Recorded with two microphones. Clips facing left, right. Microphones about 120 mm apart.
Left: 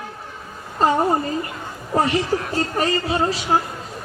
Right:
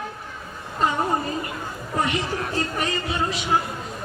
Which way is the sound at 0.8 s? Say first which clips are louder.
Left 5 dB; 35° left (ahead or behind).